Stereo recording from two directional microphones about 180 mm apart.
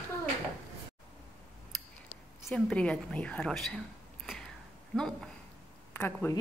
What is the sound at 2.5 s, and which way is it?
Speech, 5° left (ahead or behind).